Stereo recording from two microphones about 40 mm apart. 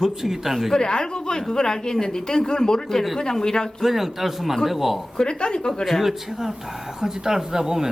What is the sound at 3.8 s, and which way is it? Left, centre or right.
A man's voice, centre.